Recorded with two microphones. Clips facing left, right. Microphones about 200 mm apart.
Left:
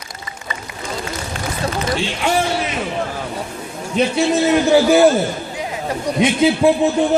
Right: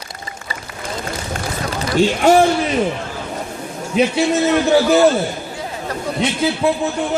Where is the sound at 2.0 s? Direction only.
45° right (ahead or behind).